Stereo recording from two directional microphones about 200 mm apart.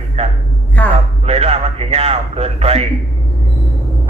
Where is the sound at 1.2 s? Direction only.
30° right (ahead or behind).